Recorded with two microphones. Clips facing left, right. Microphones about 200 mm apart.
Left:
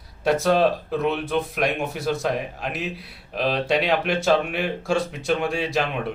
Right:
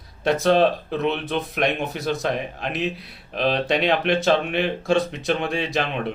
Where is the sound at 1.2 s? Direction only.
5° left (ahead or behind).